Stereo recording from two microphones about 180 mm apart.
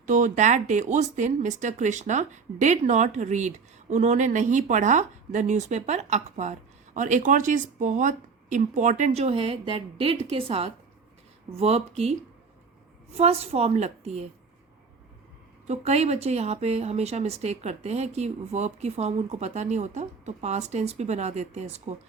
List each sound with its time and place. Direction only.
0.0 s speech: 40° right (ahead or behind)
13.1 s speech: 35° right (ahead or behind)
15.6 s speech: 35° right (ahead or behind)